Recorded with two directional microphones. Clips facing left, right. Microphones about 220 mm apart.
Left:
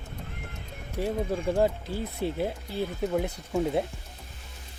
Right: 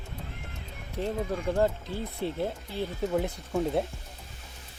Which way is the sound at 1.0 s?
10° left (ahead or behind).